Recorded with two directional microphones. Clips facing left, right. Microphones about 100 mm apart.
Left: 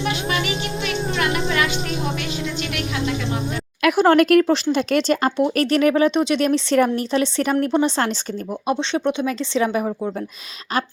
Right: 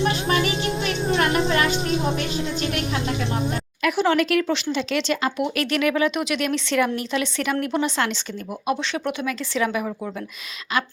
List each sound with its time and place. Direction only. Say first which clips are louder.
0.0 s music: right 2 dB; 35° right (ahead or behind)
3.8 s speech: left 6 dB; 55° left (ahead or behind); by 9.9 s 30° left (ahead or behind)